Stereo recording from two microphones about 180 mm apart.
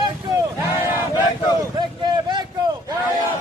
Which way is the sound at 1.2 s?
25° left (ahead or behind).